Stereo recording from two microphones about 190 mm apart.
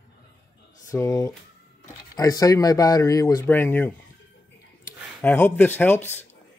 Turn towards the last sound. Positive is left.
turn(degrees=10)  # may be behind; listen again after turning